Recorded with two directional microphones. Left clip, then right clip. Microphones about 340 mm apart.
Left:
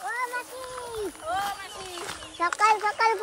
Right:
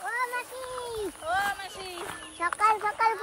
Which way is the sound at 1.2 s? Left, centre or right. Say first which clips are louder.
Right 2 dB; centre.